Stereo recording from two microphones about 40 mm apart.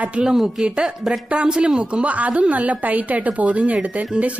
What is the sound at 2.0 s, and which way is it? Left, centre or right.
Speech, right.